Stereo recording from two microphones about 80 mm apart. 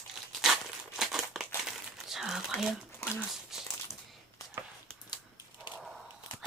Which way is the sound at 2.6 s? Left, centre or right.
Centre.